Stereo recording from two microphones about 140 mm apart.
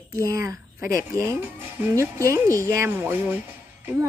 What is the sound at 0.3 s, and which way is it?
Speech, 25° right (ahead or behind).